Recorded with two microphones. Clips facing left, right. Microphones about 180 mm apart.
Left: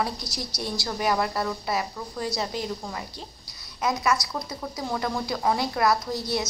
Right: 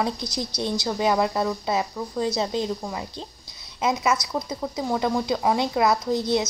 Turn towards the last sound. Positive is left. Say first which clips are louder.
# right 6 dB
turn(degrees=-20)  # may be behind; listen again after turning